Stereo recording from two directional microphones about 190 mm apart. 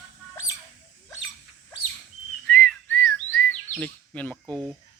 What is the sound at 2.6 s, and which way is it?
Whistling, 5° left (ahead or behind).